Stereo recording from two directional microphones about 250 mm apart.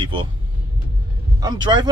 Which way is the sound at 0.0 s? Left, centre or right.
Right.